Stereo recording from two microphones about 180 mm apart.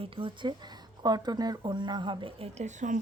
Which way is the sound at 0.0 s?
30° right (ahead or behind).